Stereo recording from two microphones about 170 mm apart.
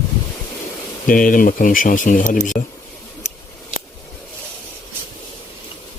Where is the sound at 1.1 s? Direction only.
55° left (ahead or behind).